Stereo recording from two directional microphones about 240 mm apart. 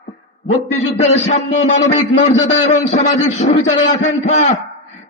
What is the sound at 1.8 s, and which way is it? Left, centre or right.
A man's voice, left.